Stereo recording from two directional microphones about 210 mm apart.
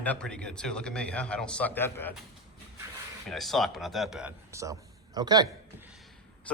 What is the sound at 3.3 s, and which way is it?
Speech, centre (ahead or behind).